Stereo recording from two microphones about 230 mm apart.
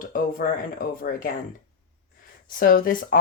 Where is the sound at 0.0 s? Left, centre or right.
Left.